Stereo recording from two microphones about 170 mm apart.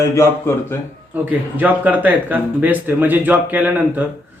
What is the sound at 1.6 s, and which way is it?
Speech, 10° right (ahead or behind).